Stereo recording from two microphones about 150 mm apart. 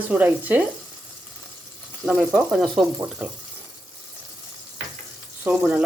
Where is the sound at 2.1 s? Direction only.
5° right (ahead or behind).